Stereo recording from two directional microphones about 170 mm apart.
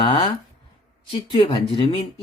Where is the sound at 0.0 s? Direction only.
30° left (ahead or behind).